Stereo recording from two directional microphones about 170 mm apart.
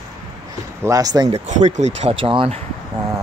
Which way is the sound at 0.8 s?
20° right (ahead or behind).